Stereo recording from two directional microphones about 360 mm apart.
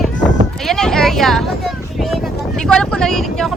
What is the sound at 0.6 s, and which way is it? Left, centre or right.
Vehicle, centre.